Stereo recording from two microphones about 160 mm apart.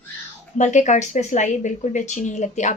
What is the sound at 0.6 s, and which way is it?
Speech, 50° left (ahead or behind).